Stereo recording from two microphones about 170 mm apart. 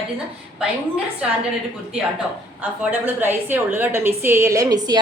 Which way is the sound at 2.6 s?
10° right (ahead or behind).